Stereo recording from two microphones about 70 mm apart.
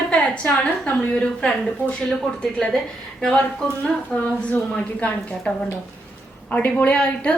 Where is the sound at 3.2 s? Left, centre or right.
Centre.